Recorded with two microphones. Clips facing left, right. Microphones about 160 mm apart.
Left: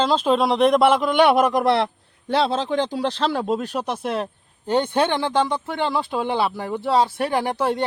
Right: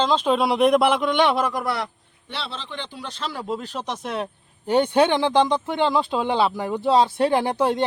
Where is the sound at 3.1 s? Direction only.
70° left (ahead or behind).